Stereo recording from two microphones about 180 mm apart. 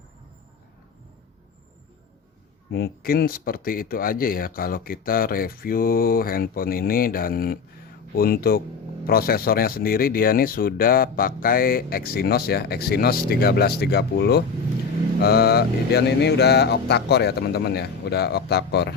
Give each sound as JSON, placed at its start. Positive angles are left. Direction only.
{"t": 2.6, "sound": "speech", "side_deg": 60}